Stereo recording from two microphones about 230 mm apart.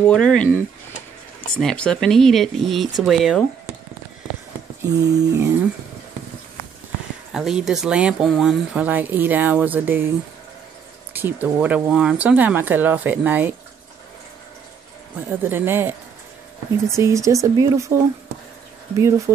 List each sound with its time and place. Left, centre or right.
0.0 s speech: centre
4.8 s speech: centre
7.3 s speech: centre
11.1 s speech: centre
15.4 s speech: centre